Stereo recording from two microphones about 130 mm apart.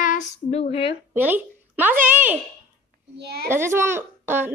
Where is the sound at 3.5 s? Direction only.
20° right (ahead or behind).